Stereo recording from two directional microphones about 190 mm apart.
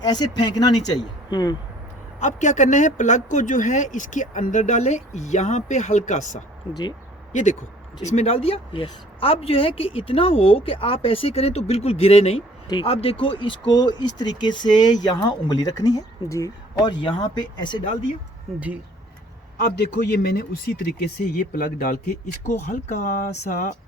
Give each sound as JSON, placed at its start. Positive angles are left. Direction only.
{"t": 0.0, "sound": "speech", "side_deg": 20}
{"t": 2.1, "sound": "a woman's voice", "side_deg": 40}
{"t": 8.1, "sound": "a woman's voice", "side_deg": 30}
{"t": 20.1, "sound": "speech", "side_deg": 55}
{"t": 21.5, "sound": "a woman's voice", "side_deg": 45}